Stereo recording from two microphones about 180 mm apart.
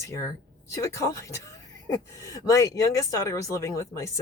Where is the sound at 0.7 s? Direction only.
15° left (ahead or behind).